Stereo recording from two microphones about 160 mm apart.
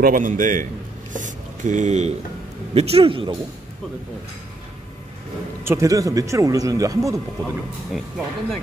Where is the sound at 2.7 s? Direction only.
40° right (ahead or behind).